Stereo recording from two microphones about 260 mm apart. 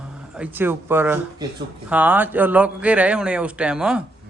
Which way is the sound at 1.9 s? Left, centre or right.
Centre.